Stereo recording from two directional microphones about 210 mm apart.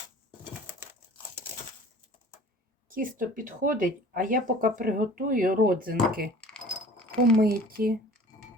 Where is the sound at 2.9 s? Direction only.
40° right (ahead or behind).